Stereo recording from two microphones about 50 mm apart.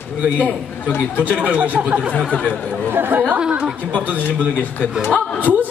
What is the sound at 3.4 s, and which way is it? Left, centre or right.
Speech, right.